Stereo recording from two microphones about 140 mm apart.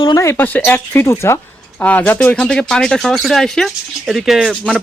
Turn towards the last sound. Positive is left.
turn(degrees=0)  # may be behind; listen again after turning